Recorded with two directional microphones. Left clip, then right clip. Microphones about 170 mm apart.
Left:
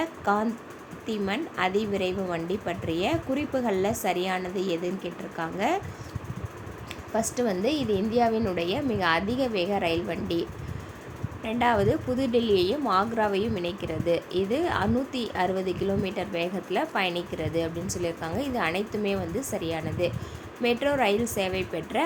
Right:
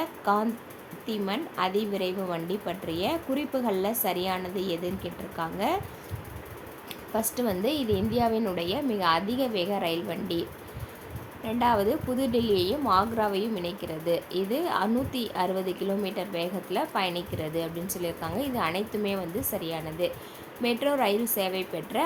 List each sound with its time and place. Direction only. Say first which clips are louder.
0.0 s a sound: even; 5° left (ahead or behind)
1.0 s speech: left 2 dB; 5° left (ahead or behind)
7.1 s speech: left 2 dB; 5° left (ahead or behind)
11.4 s speech: left 1 dB; 5° left (ahead or behind)